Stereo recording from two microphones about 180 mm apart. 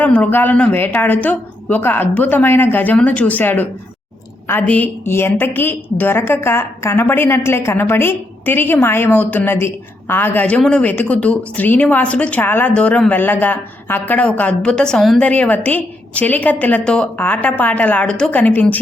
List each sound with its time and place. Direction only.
0.0 s a woman's voice: 10° left (ahead or behind)